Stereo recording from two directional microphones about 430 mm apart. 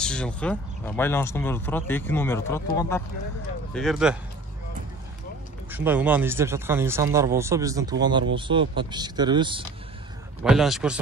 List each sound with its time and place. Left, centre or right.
0.0 s speech: centre
5.7 s speech: centre
10.4 s speech: centre